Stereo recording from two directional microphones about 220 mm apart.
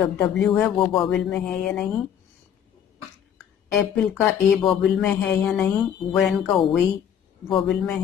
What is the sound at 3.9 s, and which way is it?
Speech, 5° left (ahead or behind).